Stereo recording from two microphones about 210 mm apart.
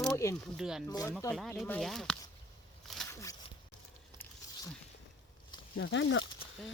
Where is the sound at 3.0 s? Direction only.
15° left (ahead or behind).